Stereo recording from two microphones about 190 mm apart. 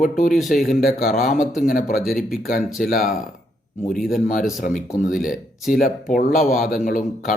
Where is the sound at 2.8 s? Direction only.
45° left (ahead or behind).